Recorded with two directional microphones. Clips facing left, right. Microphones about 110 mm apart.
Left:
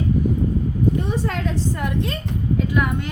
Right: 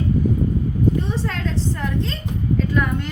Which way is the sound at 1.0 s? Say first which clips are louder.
Left 1 dB; 10° left (ahead or behind).